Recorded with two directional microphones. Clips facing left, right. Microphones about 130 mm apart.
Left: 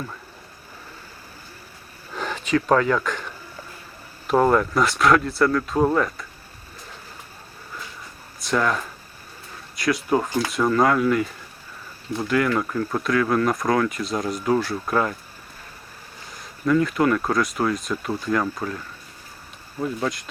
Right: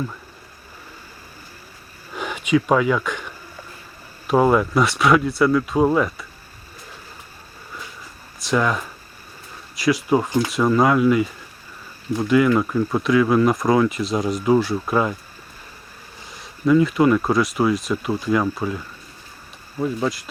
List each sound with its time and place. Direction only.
2.1 s a sound: 10° right (ahead or behind)
4.3 s speech: 5° right (ahead or behind)
8.4 s speech: 5° right (ahead or behind)
10.2 s speech: 15° right (ahead or behind)
10.5 s speech: 5° right (ahead or behind)
16.3 s speech: 5° right (ahead or behind)
19.8 s speech: 5° right (ahead or behind)